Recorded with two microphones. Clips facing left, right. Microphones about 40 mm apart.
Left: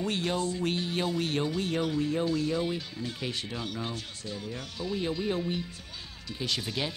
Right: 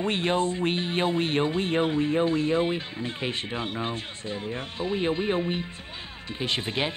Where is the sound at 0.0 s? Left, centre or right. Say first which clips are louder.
Right 5 dB; right.